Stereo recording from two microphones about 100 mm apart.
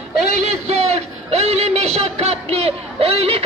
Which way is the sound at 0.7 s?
90° right.